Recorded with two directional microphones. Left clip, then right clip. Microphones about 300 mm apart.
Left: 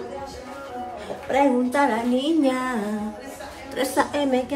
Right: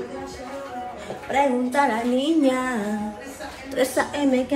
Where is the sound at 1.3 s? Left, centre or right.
Centre.